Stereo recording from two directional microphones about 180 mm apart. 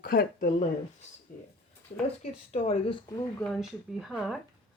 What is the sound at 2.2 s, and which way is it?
Speech, 35° left (ahead or behind).